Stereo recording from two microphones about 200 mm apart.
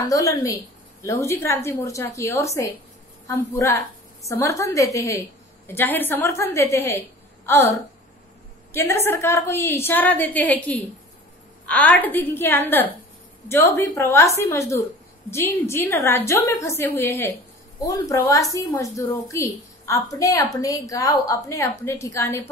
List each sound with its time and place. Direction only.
0.0 s a woman's voice: 15° left (ahead or behind)